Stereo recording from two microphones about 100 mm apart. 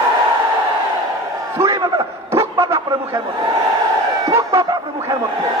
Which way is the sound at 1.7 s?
35° right (ahead or behind).